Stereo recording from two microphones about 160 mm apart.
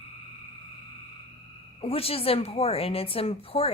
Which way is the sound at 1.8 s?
35° left (ahead or behind).